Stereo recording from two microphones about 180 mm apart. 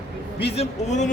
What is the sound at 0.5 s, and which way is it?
Speech, 40° left (ahead or behind).